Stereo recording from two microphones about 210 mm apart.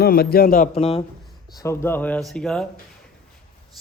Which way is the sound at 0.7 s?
30° left (ahead or behind).